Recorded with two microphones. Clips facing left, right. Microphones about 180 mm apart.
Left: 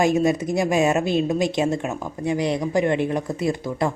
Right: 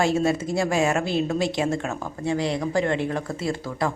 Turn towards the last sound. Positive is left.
turn(degrees=20)  # may be behind; listen again after turning